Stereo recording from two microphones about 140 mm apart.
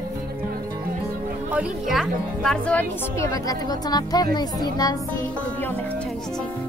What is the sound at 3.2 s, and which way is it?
Speech, 25° left (ahead or behind).